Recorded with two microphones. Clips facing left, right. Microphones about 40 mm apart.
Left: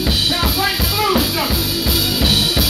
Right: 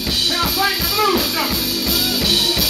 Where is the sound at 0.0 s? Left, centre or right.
Centre.